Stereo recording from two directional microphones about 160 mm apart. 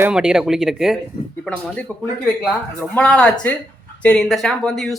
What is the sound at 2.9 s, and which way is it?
Speech, 5° left (ahead or behind).